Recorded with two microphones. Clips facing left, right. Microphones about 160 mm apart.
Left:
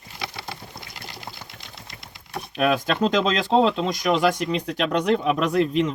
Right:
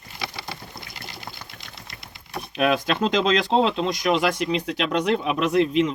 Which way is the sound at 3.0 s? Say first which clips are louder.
Even; 40° left (ahead or behind).